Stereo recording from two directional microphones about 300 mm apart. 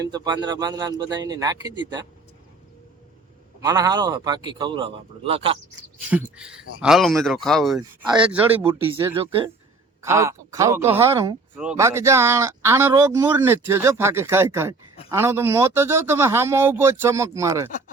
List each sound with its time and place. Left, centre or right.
0.0 s speech: centre
3.6 s speech: centre
6.1 s speech: centre
8.5 s speech: centre
17.7 s speech: left